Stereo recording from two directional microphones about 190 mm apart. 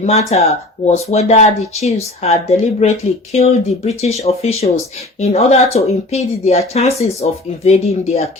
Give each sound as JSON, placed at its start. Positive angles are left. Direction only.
{"t": 0.0, "sound": "speech", "side_deg": 35}